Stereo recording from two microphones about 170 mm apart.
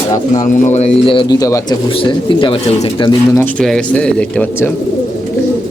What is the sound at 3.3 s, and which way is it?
Speech, 5° left (ahead or behind).